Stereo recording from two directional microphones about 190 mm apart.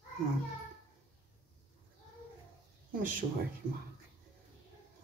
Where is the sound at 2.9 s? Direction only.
45° right (ahead or behind).